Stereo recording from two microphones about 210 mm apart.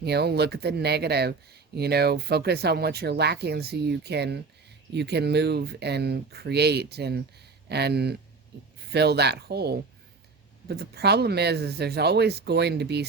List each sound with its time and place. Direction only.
0.0 s speech: 50° right (ahead or behind)